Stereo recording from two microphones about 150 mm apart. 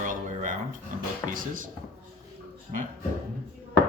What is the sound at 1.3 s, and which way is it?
Speech, 65° right (ahead or behind).